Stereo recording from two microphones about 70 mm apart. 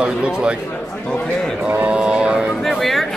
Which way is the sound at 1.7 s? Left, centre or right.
Centre.